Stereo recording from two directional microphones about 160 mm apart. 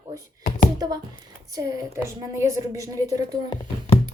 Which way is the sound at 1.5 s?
20° right (ahead or behind).